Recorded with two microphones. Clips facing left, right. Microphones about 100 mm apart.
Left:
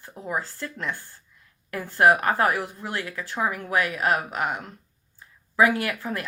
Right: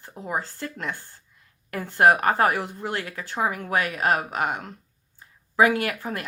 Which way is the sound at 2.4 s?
25° right (ahead or behind).